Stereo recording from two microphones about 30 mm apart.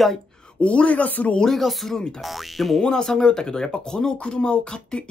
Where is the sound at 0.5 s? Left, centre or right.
Left.